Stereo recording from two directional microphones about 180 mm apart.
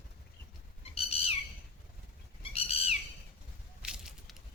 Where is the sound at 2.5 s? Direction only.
35° left (ahead or behind).